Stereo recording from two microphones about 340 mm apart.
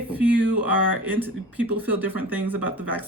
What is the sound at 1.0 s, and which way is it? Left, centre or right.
Speech, centre.